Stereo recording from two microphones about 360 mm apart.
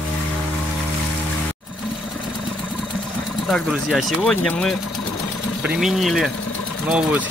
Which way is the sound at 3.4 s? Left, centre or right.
Centre.